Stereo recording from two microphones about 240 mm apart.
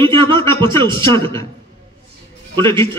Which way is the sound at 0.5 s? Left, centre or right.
Centre.